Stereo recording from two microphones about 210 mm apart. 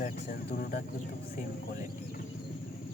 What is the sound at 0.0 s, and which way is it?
Speech, 45° left (ahead or behind).